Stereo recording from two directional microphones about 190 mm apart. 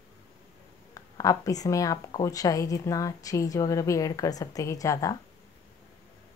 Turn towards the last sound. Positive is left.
turn(degrees=15)  # may be behind; listen again after turning